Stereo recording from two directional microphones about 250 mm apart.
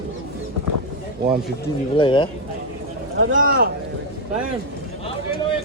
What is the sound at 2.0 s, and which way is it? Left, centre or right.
Speech, centre.